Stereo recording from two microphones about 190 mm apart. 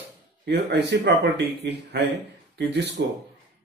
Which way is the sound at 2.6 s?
60° right (ahead or behind).